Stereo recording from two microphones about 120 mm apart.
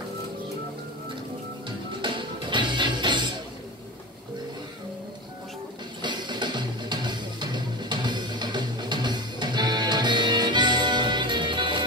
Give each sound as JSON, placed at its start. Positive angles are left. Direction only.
{"t": 2.0, "sound": "music", "side_deg": -40}
{"t": 6.0, "sound": "music", "side_deg": -40}